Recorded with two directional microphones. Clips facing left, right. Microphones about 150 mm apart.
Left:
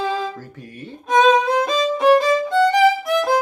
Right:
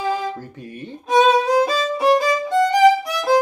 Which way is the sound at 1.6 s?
10° right (ahead or behind).